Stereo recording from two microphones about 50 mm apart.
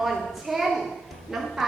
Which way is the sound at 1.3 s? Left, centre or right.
Centre.